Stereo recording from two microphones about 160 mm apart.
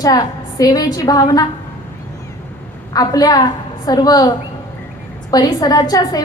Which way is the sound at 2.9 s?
25° left (ahead or behind).